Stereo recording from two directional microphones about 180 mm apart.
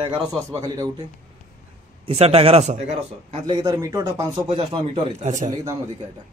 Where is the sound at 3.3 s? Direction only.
25° right (ahead or behind).